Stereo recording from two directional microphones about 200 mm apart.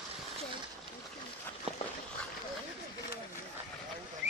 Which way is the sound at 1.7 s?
30° right (ahead or behind).